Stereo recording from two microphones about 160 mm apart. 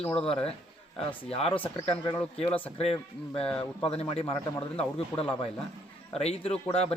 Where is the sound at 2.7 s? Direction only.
40° left (ahead or behind).